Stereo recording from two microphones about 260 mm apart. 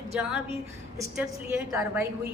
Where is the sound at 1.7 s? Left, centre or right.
Centre.